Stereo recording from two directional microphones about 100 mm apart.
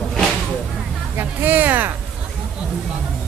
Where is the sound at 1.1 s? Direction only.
20° right (ahead or behind).